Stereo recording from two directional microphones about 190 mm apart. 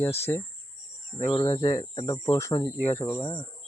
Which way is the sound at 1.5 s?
20° left (ahead or behind).